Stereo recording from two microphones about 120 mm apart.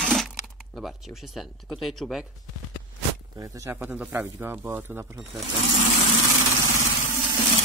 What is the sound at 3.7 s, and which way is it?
Speech, 15° right (ahead or behind).